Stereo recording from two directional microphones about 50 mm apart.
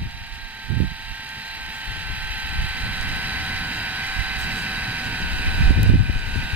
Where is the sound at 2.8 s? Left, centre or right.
Right.